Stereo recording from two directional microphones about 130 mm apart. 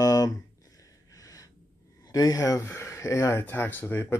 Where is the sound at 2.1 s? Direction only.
30° left (ahead or behind).